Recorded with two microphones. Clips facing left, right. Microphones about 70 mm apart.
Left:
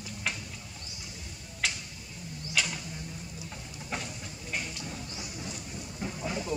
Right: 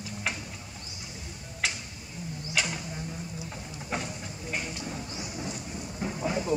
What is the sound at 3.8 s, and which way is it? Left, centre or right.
Train, centre.